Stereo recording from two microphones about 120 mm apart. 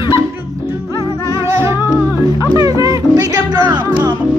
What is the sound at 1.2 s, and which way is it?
Music, 25° right (ahead or behind).